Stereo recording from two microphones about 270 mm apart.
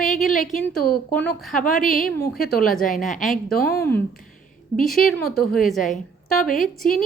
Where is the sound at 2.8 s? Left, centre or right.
Left.